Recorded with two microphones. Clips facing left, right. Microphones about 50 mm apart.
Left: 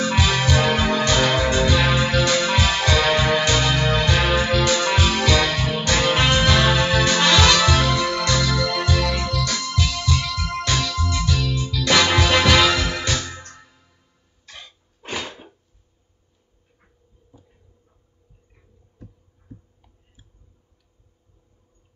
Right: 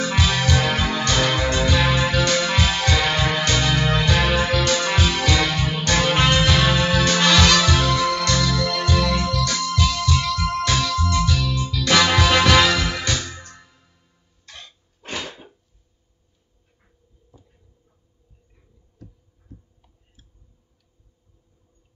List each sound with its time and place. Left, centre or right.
0.0 s music: centre
8.9 s music: centre
14.4 s cough: centre